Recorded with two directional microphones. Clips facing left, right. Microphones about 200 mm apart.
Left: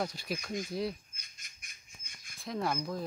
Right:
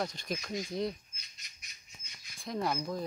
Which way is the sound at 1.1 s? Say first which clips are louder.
Even; 50° left (ahead or behind).